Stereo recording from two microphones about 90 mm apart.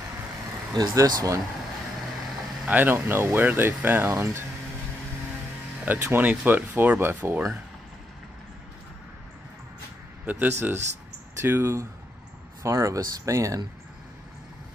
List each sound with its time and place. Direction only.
0.7 s speech: 45° right (ahead or behind)
2.6 s speech: 20° right (ahead or behind)
5.9 s speech: 20° right (ahead or behind)
10.2 s speech: 20° right (ahead or behind); by 13.6 s 35° right (ahead or behind)